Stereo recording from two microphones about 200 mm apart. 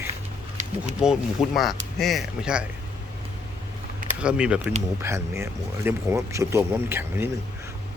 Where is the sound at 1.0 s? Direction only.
5° right (ahead or behind).